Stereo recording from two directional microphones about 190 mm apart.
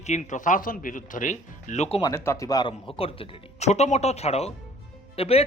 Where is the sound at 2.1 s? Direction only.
15° left (ahead or behind).